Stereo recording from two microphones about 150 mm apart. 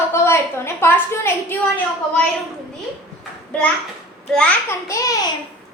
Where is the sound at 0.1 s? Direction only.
15° left (ahead or behind).